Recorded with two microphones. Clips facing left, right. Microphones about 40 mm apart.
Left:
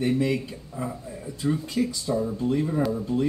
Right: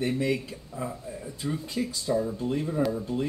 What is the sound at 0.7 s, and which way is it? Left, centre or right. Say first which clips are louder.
Speech: left 1 dB; centre.